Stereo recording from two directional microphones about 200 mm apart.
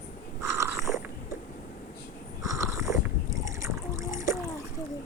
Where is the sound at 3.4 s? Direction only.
15° right (ahead or behind).